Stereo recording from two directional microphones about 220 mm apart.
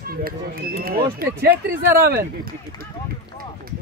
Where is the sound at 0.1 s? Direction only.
40° right (ahead or behind).